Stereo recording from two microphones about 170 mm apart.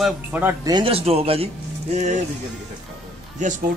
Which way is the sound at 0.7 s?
30° right (ahead or behind).